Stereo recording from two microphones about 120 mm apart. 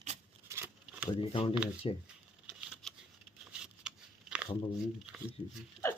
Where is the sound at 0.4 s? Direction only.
20° right (ahead or behind).